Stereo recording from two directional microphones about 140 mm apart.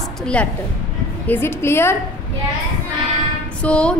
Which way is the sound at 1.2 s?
15° left (ahead or behind).